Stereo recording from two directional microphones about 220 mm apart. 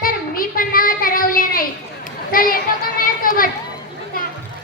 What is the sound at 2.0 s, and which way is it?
Chatter, 40° left (ahead or behind).